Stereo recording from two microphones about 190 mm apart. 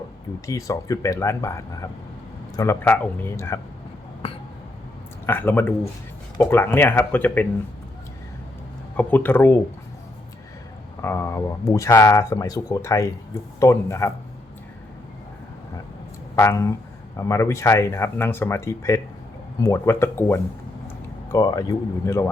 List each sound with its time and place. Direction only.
0.4 s speech: 15° left (ahead or behind)
5.2 s speech: 10° left (ahead or behind)
9.0 s speech: 10° left (ahead or behind)
11.0 s speech: 10° left (ahead or behind)
16.3 s speech: 15° left (ahead or behind)